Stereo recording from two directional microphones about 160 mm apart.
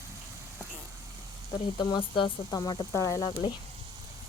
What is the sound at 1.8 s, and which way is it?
Speech, 30° left (ahead or behind).